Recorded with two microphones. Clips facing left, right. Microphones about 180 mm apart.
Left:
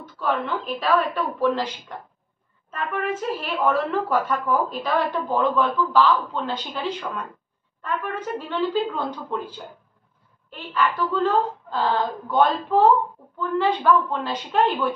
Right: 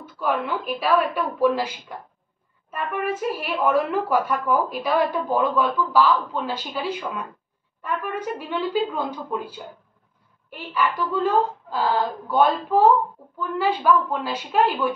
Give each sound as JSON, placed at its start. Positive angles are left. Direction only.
{"t": 0.0, "sound": "a woman's voice", "side_deg": -10}